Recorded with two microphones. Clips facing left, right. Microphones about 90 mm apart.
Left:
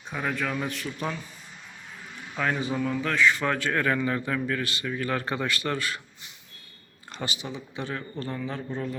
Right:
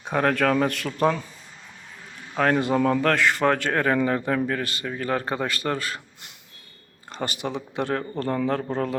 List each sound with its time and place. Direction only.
0.0 s speech: 70° right (ahead or behind)
2.3 s speech: 55° right (ahead or behind)
3.4 s a man's voice: 45° right (ahead or behind)
7.1 s speech: 40° right (ahead or behind)
7.3 s speech: 60° right (ahead or behind)